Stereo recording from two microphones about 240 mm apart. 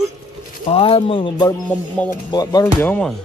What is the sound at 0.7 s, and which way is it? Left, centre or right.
Speech, left.